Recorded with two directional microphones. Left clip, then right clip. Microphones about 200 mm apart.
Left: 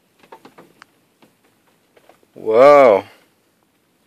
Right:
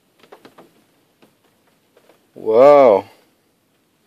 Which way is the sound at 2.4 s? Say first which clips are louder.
Even; 15° right (ahead or behind).